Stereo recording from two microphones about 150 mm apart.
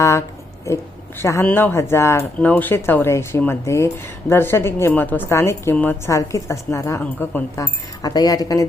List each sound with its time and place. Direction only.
0.0 s a sound: 20° left (ahead or behind)
1.2 s a woman's voice: 15° left (ahead or behind)
7.6 s speech: 25° left (ahead or behind)